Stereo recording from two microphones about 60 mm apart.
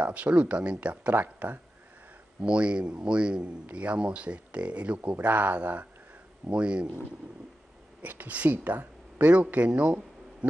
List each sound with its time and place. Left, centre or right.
0.0 s speech: right
1.1 s speech: right
2.4 s a man's voice: centre
8.0 s speech: right
9.7 s a sound: centre